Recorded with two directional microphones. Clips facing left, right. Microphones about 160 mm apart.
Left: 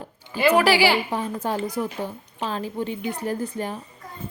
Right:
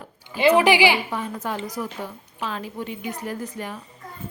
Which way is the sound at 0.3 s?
20° right (ahead or behind).